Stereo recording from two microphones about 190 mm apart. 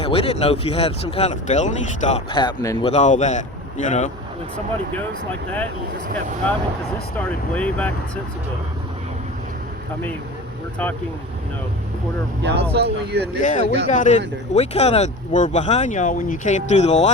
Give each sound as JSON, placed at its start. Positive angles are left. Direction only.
{"t": 0.0, "sound": "speech", "side_deg": 30}
{"t": 2.3, "sound": "a man's voice", "side_deg": 25}
{"t": 2.8, "sound": "speech", "side_deg": 35}
{"t": 7.2, "sound": "speech", "side_deg": 10}
{"t": 12.4, "sound": "speech", "side_deg": -60}
{"t": 13.4, "sound": "speech", "side_deg": 40}